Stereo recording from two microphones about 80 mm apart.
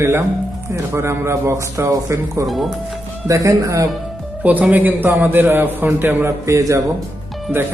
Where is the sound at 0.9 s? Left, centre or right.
Right.